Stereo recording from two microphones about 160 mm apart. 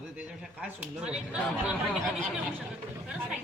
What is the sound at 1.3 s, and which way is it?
Speech, 5° right (ahead or behind).